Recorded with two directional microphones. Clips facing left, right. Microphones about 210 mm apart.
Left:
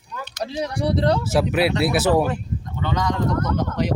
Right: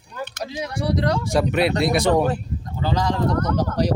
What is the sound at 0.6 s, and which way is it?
Speech, 35° left (ahead or behind).